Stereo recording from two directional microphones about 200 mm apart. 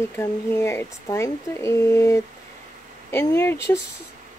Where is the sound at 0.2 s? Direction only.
15° left (ahead or behind).